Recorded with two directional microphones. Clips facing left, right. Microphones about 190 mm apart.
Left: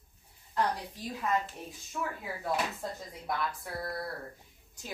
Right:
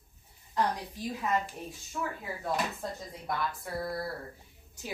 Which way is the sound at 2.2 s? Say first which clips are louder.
Left 1 dB; 5° left (ahead or behind).